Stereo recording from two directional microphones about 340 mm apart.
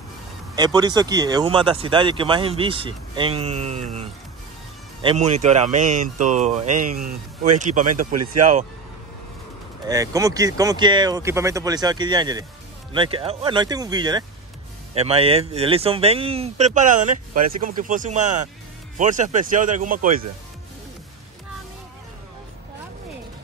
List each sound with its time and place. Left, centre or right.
0.6 s speech: centre
7.9 s speech: right
9.8 s speech: centre